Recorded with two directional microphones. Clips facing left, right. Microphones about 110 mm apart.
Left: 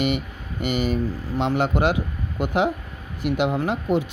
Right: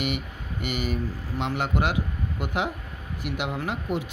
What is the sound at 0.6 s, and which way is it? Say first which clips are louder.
Speech: left 6 dB; 30° left (ahead or behind).